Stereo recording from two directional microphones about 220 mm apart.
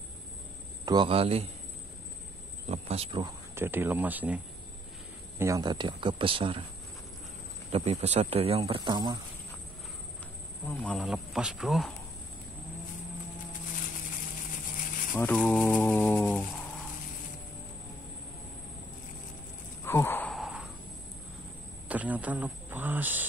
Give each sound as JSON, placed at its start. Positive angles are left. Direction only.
{"t": 0.8, "sound": "speech", "side_deg": -20}
{"t": 2.7, "sound": "speech", "side_deg": -30}
{"t": 5.4, "sound": "speech", "side_deg": -15}
{"t": 7.7, "sound": "speech", "side_deg": -30}
{"t": 10.7, "sound": "speech", "side_deg": 5}
{"t": 15.1, "sound": "mantra", "side_deg": 5}
{"t": 19.8, "sound": "a sound", "side_deg": 10}
{"t": 21.8, "sound": "speech", "side_deg": -5}